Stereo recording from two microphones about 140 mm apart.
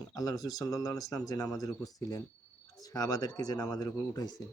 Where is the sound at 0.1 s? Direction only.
25° left (ahead or behind).